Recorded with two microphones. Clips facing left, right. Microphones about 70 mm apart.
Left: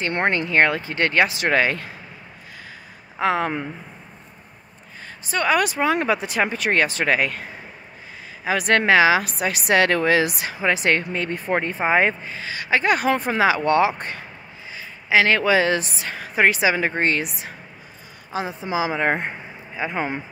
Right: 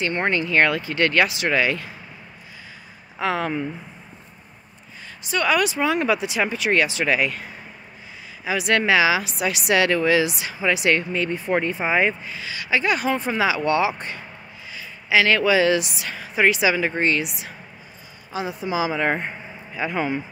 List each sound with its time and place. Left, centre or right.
0.1 s speech: left
3.2 s speech: left
5.2 s speech: left
8.5 s speech: left